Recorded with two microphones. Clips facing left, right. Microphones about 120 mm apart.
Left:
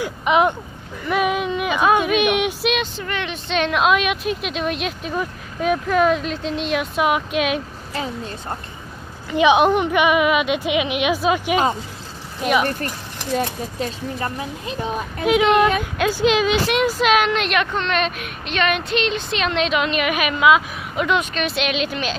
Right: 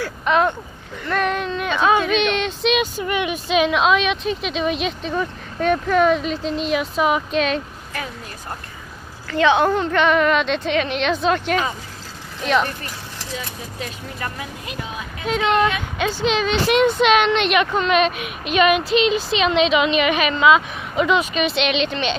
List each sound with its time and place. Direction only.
0.0 s a woman's voice: 15° left (ahead or behind)
2.7 s speech: 10° right (ahead or behind); by 7.6 s 5° left (ahead or behind)
7.9 s a woman's voice: 25° left (ahead or behind); by 12.6 s 5° left (ahead or behind)
13.7 s speech: 30° left (ahead or behind)
15.2 s a woman's voice: 10° left (ahead or behind)